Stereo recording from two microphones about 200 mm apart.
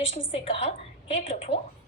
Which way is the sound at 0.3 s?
30° left (ahead or behind).